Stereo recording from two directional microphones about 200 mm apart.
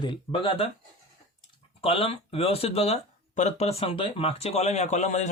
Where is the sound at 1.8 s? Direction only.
30° left (ahead or behind).